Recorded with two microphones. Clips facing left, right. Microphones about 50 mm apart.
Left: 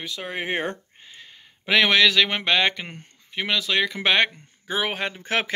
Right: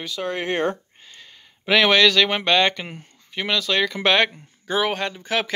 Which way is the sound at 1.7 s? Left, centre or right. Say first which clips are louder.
Right 2 dB; centre.